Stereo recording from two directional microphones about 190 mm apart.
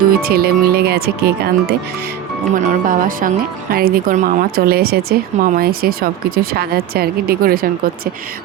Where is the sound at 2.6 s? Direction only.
40° right (ahead or behind).